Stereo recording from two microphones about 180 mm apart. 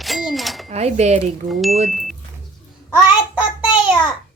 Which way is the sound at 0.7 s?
35° right (ahead or behind).